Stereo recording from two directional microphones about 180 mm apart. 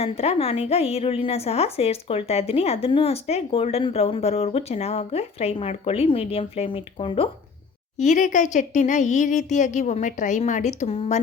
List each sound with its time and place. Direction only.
0.0 s a woman's voice: 35° left (ahead or behind)
7.9 s speech: 45° left (ahead or behind)